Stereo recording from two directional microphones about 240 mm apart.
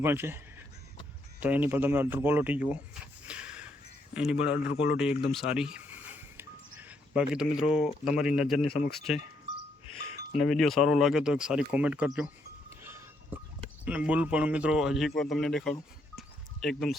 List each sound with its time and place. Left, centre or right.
0.0 s speech: centre
3.2 s snort: centre
4.1 s speech: centre
8.6 s speech: left
8.9 s speech: centre
10.3 s speech: centre
12.8 s music: centre
13.8 s speech: centre